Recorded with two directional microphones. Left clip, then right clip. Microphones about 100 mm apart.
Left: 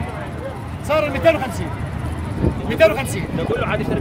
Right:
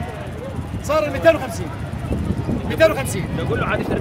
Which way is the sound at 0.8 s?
40° right (ahead or behind).